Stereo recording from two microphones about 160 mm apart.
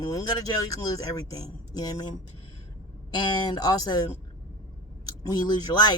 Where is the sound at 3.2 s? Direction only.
25° left (ahead or behind).